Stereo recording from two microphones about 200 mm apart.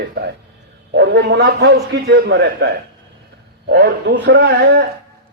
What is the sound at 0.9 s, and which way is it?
A man's voice, 55° right (ahead or behind).